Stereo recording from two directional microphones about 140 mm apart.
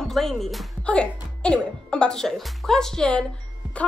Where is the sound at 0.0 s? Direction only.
Centre (ahead or behind).